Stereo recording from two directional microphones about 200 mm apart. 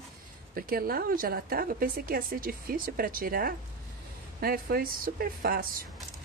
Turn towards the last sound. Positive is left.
turn(degrees=-45)  # may be behind; listen again after turning